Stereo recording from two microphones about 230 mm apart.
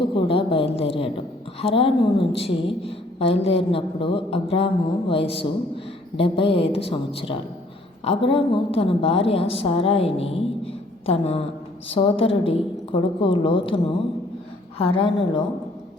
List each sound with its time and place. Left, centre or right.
0.0 s a sound: left
1.6 s a woman's voice: left
14.8 s a woman's voice: left